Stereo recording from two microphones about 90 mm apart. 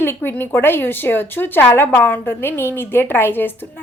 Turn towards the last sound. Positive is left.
turn(degrees=25)  # may be behind; listen again after turning